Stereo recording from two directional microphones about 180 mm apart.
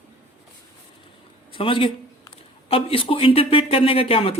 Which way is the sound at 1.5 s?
30° left (ahead or behind).